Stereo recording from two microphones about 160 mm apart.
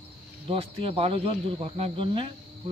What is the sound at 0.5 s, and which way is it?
Speech, 35° right (ahead or behind).